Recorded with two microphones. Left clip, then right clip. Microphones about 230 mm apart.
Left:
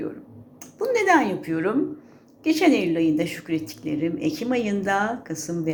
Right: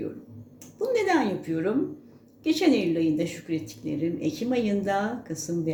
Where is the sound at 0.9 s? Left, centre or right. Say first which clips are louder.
Left 5 dB; centre.